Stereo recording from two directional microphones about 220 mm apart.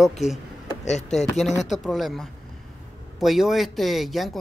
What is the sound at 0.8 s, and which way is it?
Speech, 30° left (ahead or behind).